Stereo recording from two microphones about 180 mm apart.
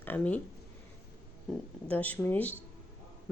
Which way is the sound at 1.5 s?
5° left (ahead or behind).